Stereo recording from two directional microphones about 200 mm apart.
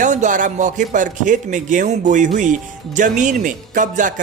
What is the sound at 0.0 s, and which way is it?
A man's voice, 40° right (ahead or behind).